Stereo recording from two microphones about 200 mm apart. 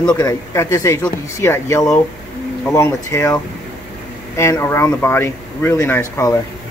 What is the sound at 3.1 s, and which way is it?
Speech, 15° left (ahead or behind).